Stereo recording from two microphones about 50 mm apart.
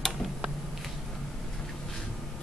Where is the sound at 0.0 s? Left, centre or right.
Centre.